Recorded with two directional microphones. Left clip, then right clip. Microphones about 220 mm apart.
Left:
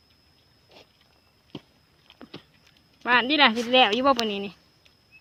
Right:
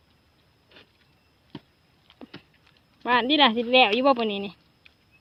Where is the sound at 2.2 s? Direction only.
15° right (ahead or behind).